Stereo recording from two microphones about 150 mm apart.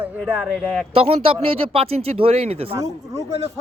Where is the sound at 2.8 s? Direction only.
20° right (ahead or behind).